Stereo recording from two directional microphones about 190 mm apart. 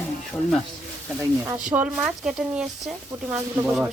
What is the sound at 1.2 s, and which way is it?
Speech, 15° right (ahead or behind).